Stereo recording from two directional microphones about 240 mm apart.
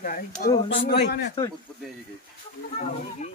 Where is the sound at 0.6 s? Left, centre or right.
Left.